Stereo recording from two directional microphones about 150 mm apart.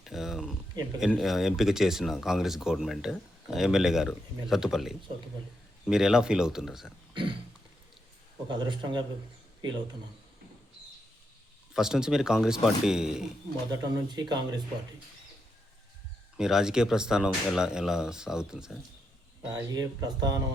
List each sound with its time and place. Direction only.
0.0 s a sound: centre (ahead or behind)
0.9 s speech: 5° right (ahead or behind)
7.1 s a sound: 35° right (ahead or behind)
8.4 s a man's voice: 30° right (ahead or behind)
11.7 s speech: 5° right (ahead or behind)
14.1 s speech: 30° right (ahead or behind)
16.4 s speech: 5° right (ahead or behind)
19.5 s speech: 25° right (ahead or behind)